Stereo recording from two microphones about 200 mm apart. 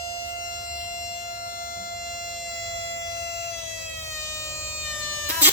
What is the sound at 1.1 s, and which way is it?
Civil defense siren, 50° left (ahead or behind).